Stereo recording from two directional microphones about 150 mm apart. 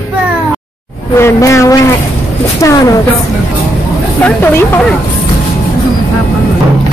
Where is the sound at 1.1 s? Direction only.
20° left (ahead or behind).